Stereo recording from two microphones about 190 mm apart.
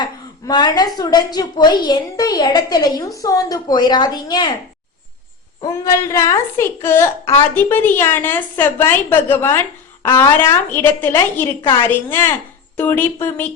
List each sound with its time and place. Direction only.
0.0 s a sound: 25° left (ahead or behind)
0.9 s a woman's voice: 20° left (ahead or behind)
5.6 s a woman's voice: 15° left (ahead or behind)